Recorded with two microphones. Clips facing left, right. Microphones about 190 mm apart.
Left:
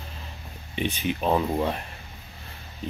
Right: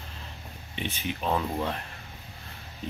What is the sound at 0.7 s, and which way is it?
Speech, 15° left (ahead or behind).